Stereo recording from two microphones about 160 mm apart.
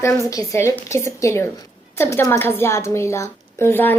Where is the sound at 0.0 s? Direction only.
20° left (ahead or behind).